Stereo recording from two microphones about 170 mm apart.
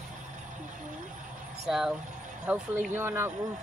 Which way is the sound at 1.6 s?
Centre (ahead or behind).